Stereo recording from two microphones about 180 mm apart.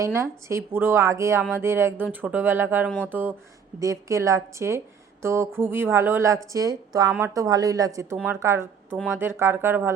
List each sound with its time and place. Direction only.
0.0 s a woman's voice: 15° right (ahead or behind)